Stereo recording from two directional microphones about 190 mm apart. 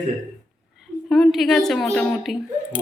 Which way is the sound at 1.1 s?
Centre (ahead or behind).